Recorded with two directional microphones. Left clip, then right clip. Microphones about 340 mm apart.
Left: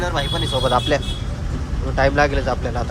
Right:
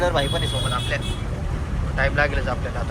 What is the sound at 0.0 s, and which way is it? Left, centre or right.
Speech, centre.